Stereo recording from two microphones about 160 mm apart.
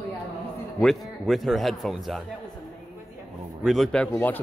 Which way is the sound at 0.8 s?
Centre (ahead or behind).